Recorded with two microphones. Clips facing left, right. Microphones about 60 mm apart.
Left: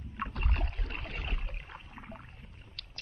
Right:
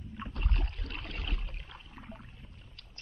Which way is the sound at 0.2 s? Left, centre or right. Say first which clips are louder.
Left 4 dB; left.